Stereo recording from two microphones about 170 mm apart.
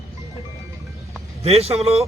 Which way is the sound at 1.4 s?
35° right (ahead or behind).